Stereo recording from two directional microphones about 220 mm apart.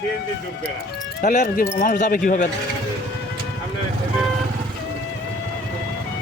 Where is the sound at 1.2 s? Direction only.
35° left (ahead or behind).